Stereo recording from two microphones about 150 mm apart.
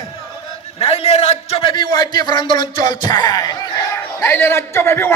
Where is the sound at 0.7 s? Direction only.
40° left (ahead or behind).